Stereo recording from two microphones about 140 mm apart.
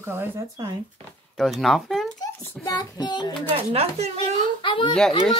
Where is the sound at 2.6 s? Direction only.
30° left (ahead or behind).